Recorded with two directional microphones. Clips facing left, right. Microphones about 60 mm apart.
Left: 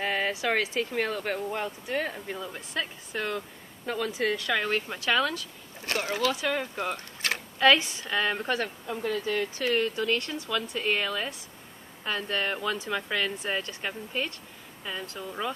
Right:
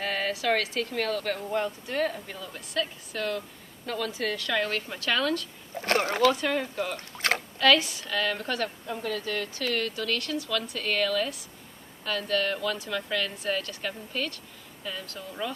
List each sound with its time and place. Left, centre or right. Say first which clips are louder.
0.0 s speech: left 1 dB; centre
5.8 s speech: right 5 dB; right
6.3 s speech: right 1 dB; centre
7.2 s a sound: right 7 dB; right
7.5 s speech: left 2 dB; left
8.8 s speech: left 2 dB; centre